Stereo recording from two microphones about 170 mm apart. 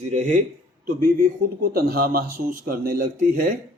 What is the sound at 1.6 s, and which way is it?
A man's voice, 60° right (ahead or behind).